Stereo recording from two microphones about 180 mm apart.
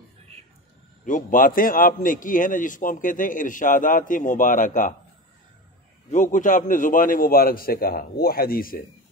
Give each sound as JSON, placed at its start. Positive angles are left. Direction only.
{"t": 1.0, "sound": "a man's voice", "side_deg": 45}
{"t": 6.0, "sound": "a man's voice", "side_deg": 45}